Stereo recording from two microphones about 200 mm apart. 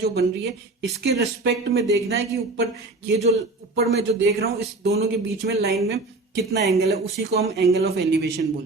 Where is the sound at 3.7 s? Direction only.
50° right (ahead or behind).